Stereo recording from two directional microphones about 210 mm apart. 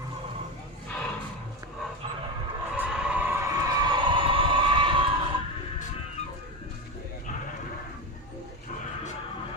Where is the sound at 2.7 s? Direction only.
5° right (ahead or behind); by 5.0 s 25° right (ahead or behind).